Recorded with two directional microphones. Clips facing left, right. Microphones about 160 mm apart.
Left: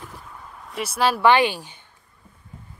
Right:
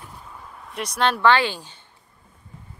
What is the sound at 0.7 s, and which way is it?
Speech, 5° left (ahead or behind).